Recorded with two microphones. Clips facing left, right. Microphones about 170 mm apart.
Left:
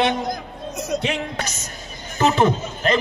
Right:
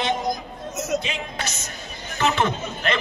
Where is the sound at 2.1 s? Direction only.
35° left (ahead or behind).